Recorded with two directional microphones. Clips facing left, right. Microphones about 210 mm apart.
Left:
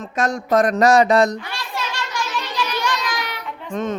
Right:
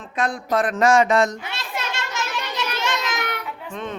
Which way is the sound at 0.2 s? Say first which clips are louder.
Left 4 dB; 40° left (ahead or behind).